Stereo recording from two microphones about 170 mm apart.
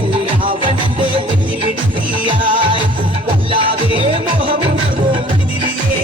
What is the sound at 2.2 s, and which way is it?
Music, 30° right (ahead or behind).